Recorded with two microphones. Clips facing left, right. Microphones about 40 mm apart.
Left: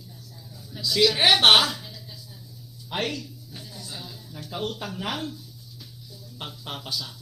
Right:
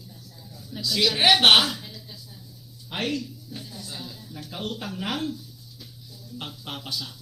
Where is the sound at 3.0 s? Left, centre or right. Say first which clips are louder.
Right 1 dB; right.